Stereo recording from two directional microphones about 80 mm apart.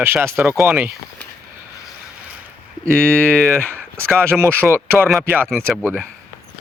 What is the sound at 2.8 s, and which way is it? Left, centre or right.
Speech, centre.